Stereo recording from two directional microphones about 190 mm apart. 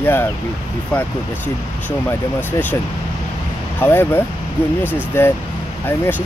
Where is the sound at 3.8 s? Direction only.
10° left (ahead or behind).